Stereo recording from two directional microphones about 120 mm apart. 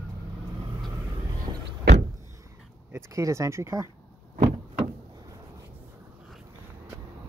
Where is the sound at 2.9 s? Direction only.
25° right (ahead or behind).